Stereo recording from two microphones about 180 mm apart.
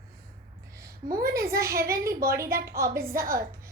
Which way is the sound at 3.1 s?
55° right (ahead or behind).